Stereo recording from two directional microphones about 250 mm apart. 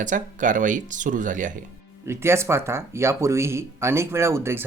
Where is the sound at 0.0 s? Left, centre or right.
Right.